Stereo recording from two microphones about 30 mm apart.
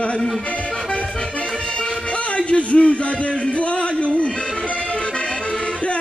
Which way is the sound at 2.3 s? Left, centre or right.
Left.